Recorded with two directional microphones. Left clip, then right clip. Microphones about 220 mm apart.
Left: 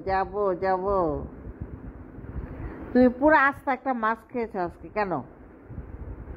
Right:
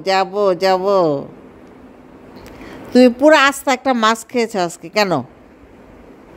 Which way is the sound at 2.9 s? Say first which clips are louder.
Right 9 dB; 45° right (ahead or behind).